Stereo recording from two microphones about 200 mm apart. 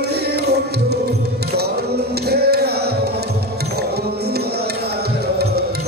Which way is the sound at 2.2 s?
55° right (ahead or behind).